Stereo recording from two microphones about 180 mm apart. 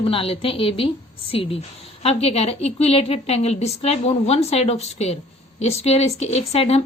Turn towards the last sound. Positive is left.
turn(degrees=35)  # may be behind; listen again after turning